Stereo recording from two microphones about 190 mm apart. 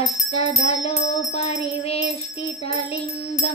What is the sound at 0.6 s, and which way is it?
Music, 30° left (ahead or behind).